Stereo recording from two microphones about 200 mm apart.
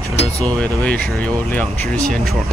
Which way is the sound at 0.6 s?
5° left (ahead or behind).